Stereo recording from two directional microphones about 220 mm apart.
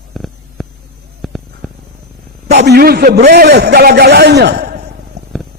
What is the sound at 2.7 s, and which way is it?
Speech, 45° right (ahead or behind).